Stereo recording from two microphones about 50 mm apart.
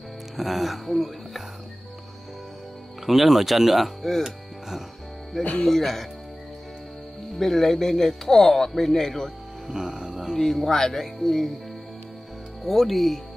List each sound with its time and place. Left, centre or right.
0.4 s speech: centre
3.1 s speech: centre
4.2 s music: centre
5.4 s speech: left
5.7 s speech: centre
7.3 s speech: centre
9.7 s music: centre
10.3 s speech: centre
12.6 s speech: centre